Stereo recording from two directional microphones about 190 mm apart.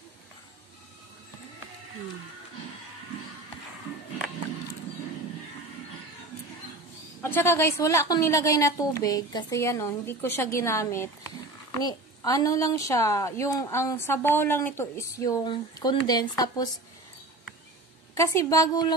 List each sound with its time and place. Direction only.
7.2 s a woman's voice: 10° left (ahead or behind)
18.1 s a woman's voice: 15° left (ahead or behind)